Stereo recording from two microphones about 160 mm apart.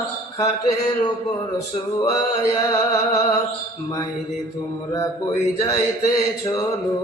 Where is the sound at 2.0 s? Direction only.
25° left (ahead or behind).